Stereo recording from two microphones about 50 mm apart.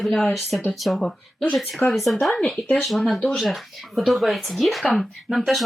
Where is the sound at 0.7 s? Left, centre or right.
Centre.